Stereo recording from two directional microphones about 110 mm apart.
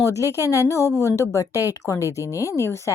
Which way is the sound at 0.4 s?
30° left (ahead or behind).